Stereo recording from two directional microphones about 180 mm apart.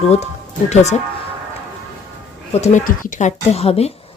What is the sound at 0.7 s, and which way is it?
Speech, 40° left (ahead or behind).